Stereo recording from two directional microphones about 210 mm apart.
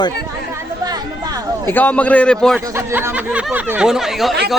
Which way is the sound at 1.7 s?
10° left (ahead or behind).